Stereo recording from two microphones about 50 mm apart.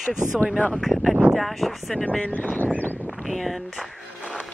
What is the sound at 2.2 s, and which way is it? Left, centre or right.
Speech, left.